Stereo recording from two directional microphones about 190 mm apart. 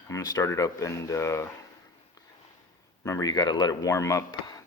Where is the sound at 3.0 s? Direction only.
15° left (ahead or behind).